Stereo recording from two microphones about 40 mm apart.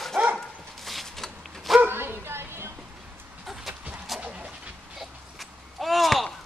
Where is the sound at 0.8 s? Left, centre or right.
Centre.